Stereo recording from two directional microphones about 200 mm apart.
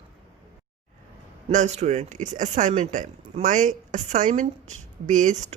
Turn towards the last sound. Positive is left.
turn(degrees=-40)  # may be behind; listen again after turning